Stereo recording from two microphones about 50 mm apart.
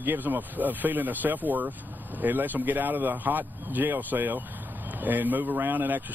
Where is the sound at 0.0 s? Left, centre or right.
Right.